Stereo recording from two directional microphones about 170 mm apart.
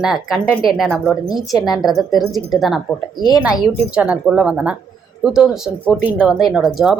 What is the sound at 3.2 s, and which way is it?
Speech, 25° left (ahead or behind).